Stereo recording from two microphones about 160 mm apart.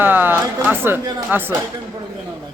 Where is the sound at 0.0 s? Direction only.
15° right (ahead or behind).